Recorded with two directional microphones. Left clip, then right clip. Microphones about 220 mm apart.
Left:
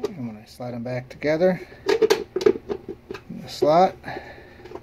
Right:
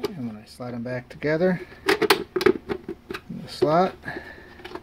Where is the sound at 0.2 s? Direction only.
15° right (ahead or behind).